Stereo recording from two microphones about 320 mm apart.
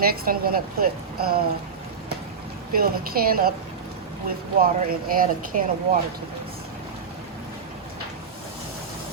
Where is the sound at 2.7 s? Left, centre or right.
Right.